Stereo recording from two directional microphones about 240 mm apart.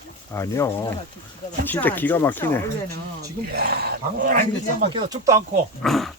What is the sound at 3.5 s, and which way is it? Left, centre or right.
Speech, right.